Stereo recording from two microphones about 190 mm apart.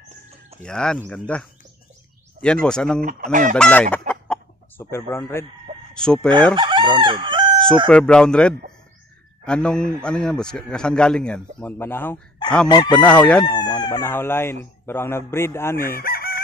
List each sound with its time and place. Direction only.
0.6 s a man's voice: 5° left (ahead or behind)
3.0 s chicken: 45° right (ahead or behind)
3.5 s a man's voice: 5° left (ahead or behind)
4.1 s chicken: 10° left (ahead or behind)
5.9 s a man's voice: 5° left (ahead or behind)
6.5 s chicken: 25° right (ahead or behind)
7.0 s crowing: 25° right (ahead or behind)
7.9 s a man's voice: 5° left (ahead or behind)
12.6 s chicken: 25° left (ahead or behind)
12.9 s speech: 5° left (ahead or behind)
13.5 s speech: 20° left (ahead or behind)
16.0 s chicken: 50° left (ahead or behind)